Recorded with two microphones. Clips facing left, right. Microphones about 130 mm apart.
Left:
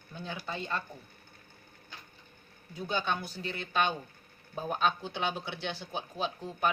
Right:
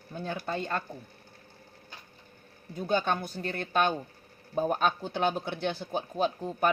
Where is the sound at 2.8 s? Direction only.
50° right (ahead or behind).